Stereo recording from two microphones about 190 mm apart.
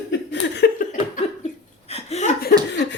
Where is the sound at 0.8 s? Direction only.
45° left (ahead or behind).